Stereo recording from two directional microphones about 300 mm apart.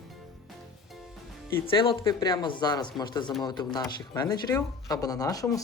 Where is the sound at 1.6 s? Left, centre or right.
Centre.